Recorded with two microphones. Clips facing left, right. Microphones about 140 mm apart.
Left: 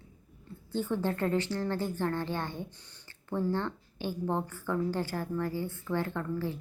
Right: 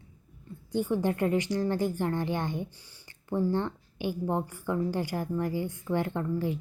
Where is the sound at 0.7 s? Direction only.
15° right (ahead or behind).